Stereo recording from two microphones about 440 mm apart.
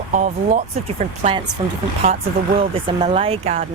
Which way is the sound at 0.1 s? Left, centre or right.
Centre.